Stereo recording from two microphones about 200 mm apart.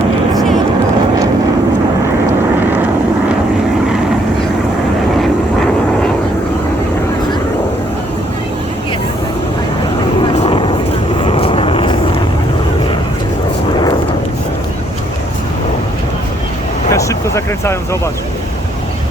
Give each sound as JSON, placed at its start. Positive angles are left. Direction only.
{"t": 10.4, "sound": "vehicle", "side_deg": 25}
{"t": 16.9, "sound": "vehicle", "side_deg": 15}